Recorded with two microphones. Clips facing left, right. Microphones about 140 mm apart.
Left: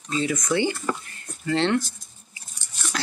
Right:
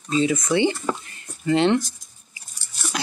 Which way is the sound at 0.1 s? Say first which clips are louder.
Right 4 dB; 20° right (ahead or behind).